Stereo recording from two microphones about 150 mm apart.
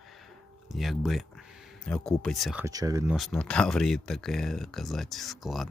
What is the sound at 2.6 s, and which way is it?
Speech, 20° right (ahead or behind).